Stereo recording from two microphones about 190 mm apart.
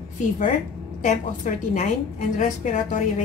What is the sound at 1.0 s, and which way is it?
A woman's voice, 40° left (ahead or behind).